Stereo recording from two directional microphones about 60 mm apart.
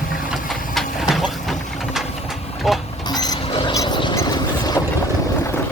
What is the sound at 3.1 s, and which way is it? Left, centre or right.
Mechanisms, left.